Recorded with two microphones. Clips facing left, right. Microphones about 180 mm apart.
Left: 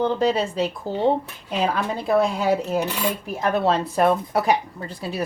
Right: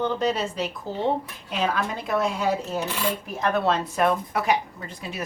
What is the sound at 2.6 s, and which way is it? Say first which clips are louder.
Cutlery: left 5 dB; 15° left (ahead or behind).